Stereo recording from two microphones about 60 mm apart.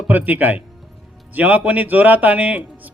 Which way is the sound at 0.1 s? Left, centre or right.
Right.